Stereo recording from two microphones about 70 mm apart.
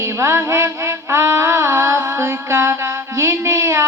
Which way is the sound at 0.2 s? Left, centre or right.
Right.